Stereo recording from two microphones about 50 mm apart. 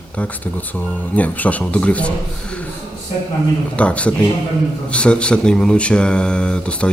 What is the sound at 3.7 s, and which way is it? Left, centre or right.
Speech, left.